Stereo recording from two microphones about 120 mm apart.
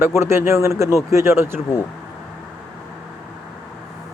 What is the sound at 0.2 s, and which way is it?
Speech, 20° right (ahead or behind).